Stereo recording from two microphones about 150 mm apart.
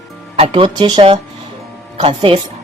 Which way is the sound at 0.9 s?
40° right (ahead or behind).